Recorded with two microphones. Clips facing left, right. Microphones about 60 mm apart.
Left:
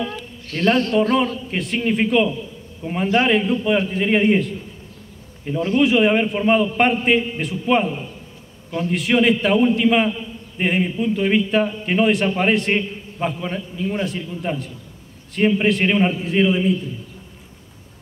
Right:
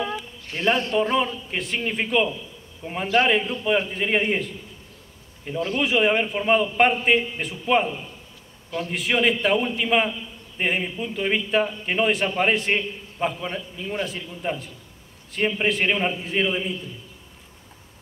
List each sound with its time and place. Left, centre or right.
0.0 s a sound: centre
1.1 s a man's voice: centre
8.9 s a man's voice: centre